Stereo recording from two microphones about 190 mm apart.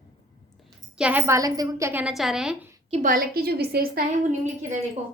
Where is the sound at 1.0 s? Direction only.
10° right (ahead or behind).